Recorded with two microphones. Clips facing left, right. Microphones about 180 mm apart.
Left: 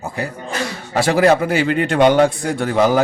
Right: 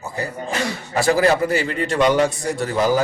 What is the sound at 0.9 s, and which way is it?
A man's voice, 90° left.